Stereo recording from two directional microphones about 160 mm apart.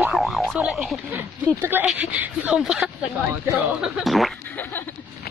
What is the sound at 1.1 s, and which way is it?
Speech, 10° right (ahead or behind).